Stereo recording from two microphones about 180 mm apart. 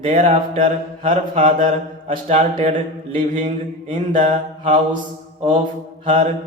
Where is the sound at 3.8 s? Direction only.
30° right (ahead or behind).